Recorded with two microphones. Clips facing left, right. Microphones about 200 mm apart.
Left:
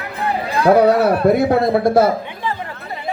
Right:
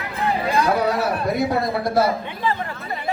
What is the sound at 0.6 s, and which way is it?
A man's voice, 60° left (ahead or behind).